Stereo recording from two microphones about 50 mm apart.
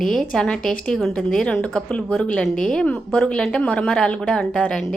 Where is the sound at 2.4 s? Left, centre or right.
Centre.